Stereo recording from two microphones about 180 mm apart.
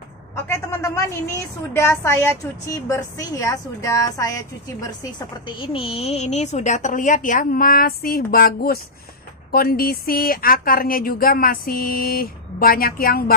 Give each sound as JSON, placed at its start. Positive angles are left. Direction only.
{"t": 0.5, "sound": "a woman's voice", "side_deg": 15}
{"t": 5.6, "sound": "speech", "side_deg": 30}